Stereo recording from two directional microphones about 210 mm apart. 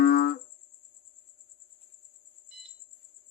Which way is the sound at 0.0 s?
50° left (ahead or behind).